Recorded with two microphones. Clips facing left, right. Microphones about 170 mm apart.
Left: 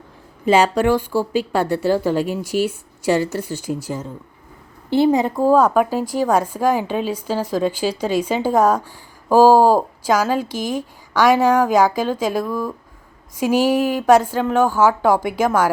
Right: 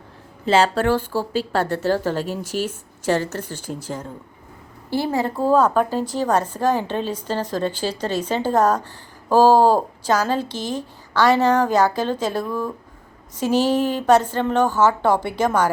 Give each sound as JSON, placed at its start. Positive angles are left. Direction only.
{"t": 0.4, "sound": "a woman's voice", "side_deg": 15}